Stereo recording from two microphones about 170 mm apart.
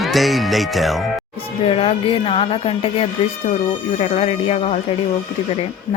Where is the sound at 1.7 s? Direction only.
35° left (ahead or behind).